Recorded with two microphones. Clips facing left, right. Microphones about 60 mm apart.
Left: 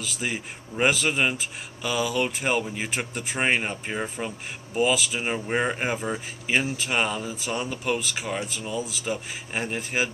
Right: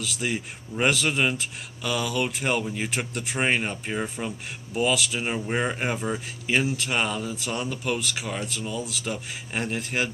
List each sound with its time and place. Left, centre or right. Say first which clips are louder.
0.0 s speech: right 1 dB; centre